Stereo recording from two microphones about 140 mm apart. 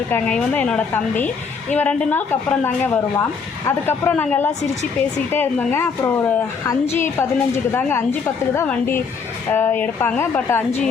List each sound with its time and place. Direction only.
0.1 s a woman's voice: 10° left (ahead or behind)